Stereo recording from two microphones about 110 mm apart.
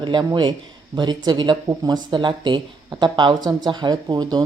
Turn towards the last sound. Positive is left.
turn(degrees=-40)  # may be behind; listen again after turning